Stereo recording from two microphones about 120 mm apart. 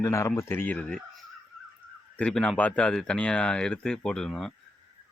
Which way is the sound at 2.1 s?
10° left (ahead or behind).